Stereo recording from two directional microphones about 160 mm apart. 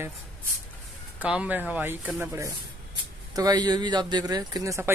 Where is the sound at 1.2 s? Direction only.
10° right (ahead or behind).